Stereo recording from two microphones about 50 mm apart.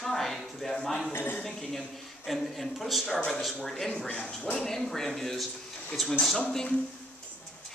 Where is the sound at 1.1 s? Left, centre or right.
Left.